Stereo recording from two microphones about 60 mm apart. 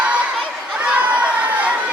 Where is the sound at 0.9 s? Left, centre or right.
Right.